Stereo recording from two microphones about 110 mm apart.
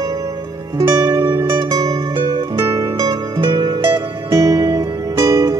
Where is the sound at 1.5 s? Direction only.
40° right (ahead or behind).